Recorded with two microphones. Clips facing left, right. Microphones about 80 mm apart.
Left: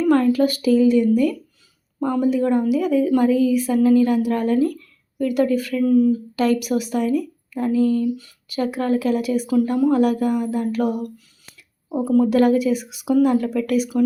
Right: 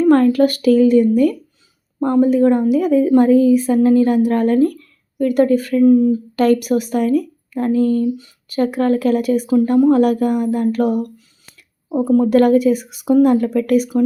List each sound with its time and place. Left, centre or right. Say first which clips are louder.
0.0 s a woman's voice: right 4 dB; right
5.8 s speech: right 4 dB; right
6.3 s a woman's voice: right 5 dB; right
12.0 s a woman's voice: right 3 dB; right
12.4 s a woman's voice: right 4 dB; right